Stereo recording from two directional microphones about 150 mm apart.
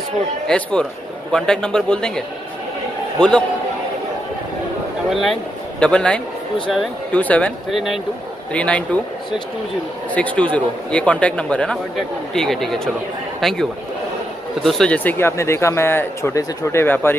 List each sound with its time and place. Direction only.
0.5 s a man's voice: 5° left (ahead or behind)
5.1 s a man's voice: centre (ahead or behind)
10.1 s a man's voice: 10° left (ahead or behind)